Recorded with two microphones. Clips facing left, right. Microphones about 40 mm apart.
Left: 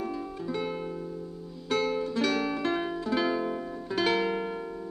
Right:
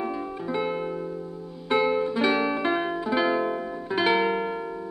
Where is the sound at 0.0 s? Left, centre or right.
Right.